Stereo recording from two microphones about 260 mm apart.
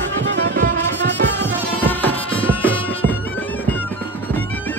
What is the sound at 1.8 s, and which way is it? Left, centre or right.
Insect, centre.